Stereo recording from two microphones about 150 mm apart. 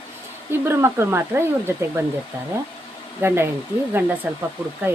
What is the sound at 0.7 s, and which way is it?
Speech, 15° right (ahead or behind).